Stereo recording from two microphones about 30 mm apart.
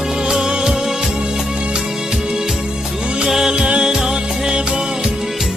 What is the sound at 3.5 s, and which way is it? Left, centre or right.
Music, right.